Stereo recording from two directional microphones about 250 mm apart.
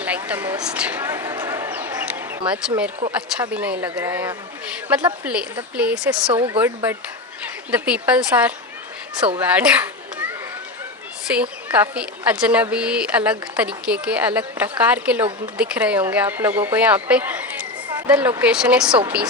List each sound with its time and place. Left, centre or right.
0.0 s a woman's voice: centre
6.3 s a woman's voice: centre
9.4 s children playing: centre
11.3 s a woman's voice: centre